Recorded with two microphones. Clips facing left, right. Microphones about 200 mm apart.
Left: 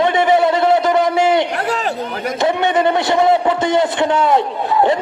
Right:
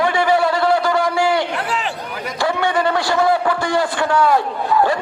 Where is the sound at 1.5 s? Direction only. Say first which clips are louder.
Left 3 dB; 40° left (ahead or behind).